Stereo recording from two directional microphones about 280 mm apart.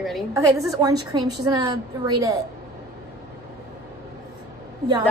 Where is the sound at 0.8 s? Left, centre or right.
Centre.